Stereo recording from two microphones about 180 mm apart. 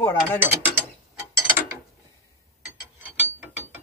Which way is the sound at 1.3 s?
15° right (ahead or behind).